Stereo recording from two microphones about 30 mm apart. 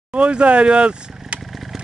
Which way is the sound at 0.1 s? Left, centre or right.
Right.